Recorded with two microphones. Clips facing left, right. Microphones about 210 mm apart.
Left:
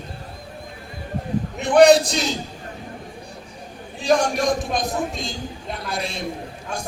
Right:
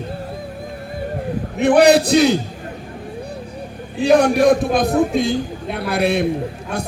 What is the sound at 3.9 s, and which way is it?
A man's voice, 60° right (ahead or behind).